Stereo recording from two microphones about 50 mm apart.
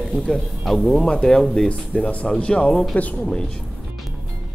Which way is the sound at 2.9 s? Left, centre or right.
Left.